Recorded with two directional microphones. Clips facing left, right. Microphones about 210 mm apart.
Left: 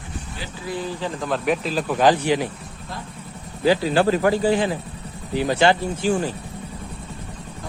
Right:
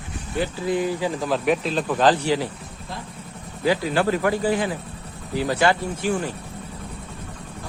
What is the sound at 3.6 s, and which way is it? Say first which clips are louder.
Speech: left 3 dB; 30° left (ahead or behind).